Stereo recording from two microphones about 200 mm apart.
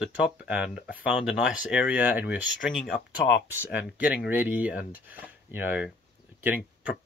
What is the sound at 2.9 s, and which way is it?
Speech, 60° left (ahead or behind).